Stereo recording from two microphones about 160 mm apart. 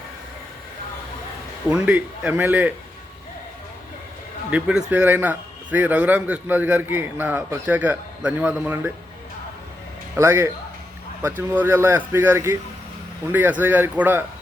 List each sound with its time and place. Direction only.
1.7 s a man's voice: 5° right (ahead or behind)
4.5 s a man's voice: 5° right (ahead or behind)
10.2 s a man's voice: 15° right (ahead or behind)